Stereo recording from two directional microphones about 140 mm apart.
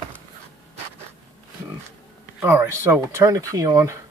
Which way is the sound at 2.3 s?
15° right (ahead or behind).